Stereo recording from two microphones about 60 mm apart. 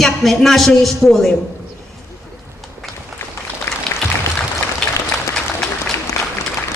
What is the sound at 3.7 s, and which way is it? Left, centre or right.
Applause, left.